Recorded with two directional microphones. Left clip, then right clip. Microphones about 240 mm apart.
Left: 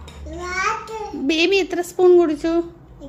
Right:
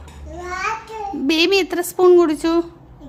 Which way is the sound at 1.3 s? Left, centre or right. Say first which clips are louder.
Right 1 dB; centre.